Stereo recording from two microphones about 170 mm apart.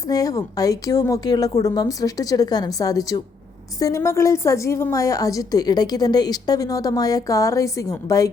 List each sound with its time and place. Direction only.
0.1 s a woman's voice: 20° left (ahead or behind)